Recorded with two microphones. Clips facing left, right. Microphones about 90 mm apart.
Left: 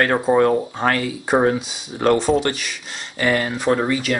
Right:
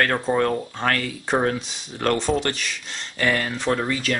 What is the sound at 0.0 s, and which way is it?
Speech, 15° left (ahead or behind).